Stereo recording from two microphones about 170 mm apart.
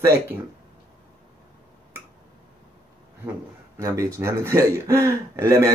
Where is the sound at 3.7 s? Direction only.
20° right (ahead or behind).